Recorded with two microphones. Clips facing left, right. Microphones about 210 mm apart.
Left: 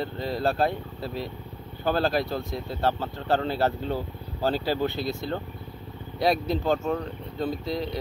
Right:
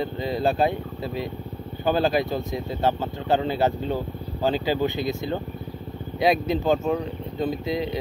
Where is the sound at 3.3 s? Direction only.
15° right (ahead or behind).